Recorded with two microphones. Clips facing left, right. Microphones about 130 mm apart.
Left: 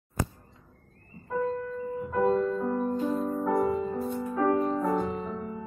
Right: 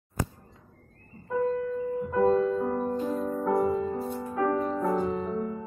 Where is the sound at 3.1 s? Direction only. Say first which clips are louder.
Left 1 dB; 10° left (ahead or behind).